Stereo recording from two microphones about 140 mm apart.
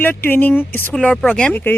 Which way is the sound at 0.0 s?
15° left (ahead or behind).